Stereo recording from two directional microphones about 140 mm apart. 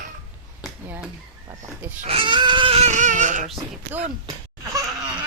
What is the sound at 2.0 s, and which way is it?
Speech, 35° right (ahead or behind).